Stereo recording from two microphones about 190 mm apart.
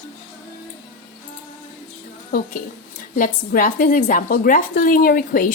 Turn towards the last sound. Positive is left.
turn(degrees=50)  # may be behind; listen again after turning